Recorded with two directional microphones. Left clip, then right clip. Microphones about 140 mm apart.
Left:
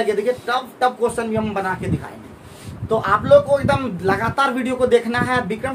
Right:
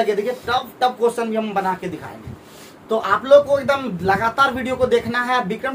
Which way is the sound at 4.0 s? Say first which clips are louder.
Right 5 dB; 20° left (ahead or behind).